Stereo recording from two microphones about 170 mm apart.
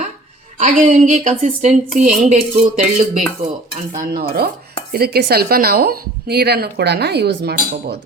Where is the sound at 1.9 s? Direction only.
5° right (ahead or behind).